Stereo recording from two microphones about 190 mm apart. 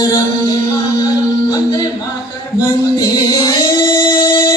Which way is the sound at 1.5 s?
20° left (ahead or behind).